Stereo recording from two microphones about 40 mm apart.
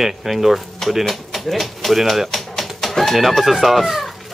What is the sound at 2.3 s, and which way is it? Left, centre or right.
Music, centre.